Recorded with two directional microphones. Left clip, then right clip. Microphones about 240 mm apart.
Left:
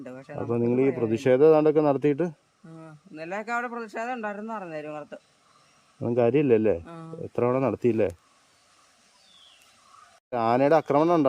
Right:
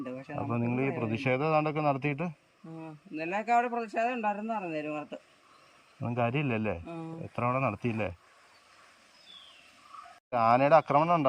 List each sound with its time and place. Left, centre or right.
0.2 s speech: centre
0.4 s speech: left
2.8 s a man's voice: centre
6.0 s speech: left
6.8 s a man's voice: centre
7.3 s speech: left
10.2 s speech: left